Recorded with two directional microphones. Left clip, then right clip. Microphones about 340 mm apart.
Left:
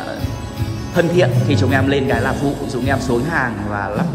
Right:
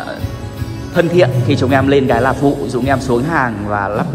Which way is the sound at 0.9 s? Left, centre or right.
Centre.